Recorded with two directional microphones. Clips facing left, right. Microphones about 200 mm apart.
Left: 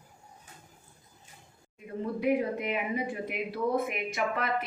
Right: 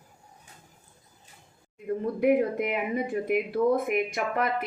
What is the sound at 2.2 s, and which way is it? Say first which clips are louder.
Speech: right 5 dB; 50° right (ahead or behind).